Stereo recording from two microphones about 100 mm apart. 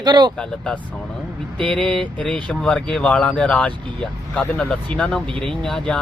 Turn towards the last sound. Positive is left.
turn(degrees=5)  # may be behind; listen again after turning